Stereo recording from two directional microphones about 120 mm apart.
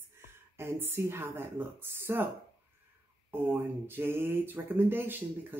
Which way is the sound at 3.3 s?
15° right (ahead or behind).